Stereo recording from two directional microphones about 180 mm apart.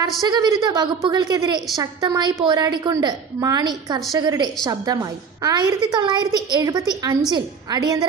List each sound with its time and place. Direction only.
0.3 s a woman's voice: 20° right (ahead or behind)